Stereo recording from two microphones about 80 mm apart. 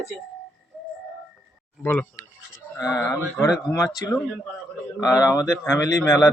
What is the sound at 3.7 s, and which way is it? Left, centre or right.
Speech, left.